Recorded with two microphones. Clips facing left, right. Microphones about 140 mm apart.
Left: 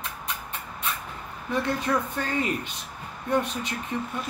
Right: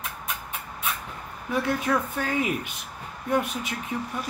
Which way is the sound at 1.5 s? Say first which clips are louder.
Right 1 dB; 5° right (ahead or behind).